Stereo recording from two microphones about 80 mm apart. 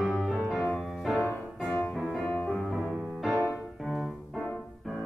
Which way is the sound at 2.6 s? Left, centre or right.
Centre.